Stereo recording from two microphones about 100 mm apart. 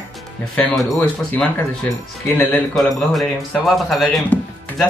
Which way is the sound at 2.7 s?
Centre (ahead or behind).